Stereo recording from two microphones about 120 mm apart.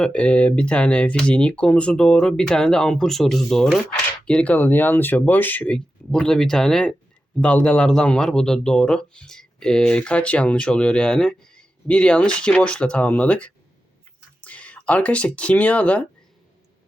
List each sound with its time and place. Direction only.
0.0 s speech: 10° left (ahead or behind)